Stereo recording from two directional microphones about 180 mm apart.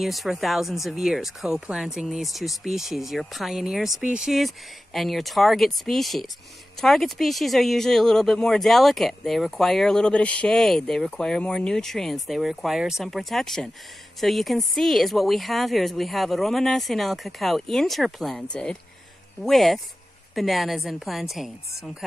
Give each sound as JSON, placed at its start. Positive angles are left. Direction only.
{"t": 0.0, "sound": "speech", "side_deg": 0}